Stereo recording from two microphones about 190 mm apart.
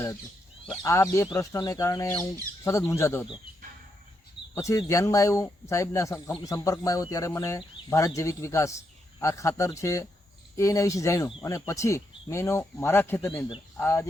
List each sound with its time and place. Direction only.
0.8 s speech: 15° left (ahead or behind)
4.5 s speech: 15° left (ahead or behind)